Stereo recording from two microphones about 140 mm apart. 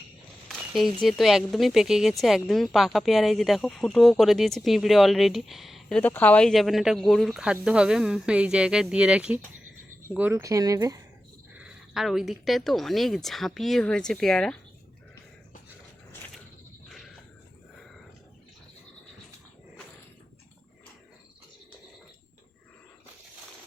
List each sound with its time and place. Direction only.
0.4 s a sound: centre (ahead or behind)
1.0 s speech: centre (ahead or behind)
6.0 s speech: 10° left (ahead or behind); by 10.5 s 15° right (ahead or behind)
10.5 s speech: 25° right (ahead or behind)
11.5 s speech: 5° right (ahead or behind)